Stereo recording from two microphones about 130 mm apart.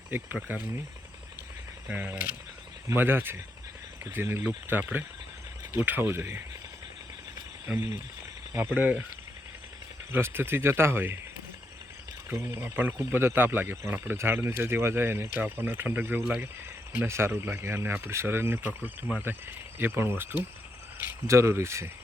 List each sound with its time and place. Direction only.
0.1 s speech: 15° right (ahead or behind)
1.9 s speech: 15° right (ahead or behind)
7.7 s speech: 20° right (ahead or behind)
10.1 s speech: 20° right (ahead or behind)
12.3 s speech: 20° right (ahead or behind)